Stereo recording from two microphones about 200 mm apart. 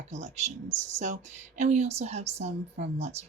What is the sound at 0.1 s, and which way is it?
Speech, 35° right (ahead or behind).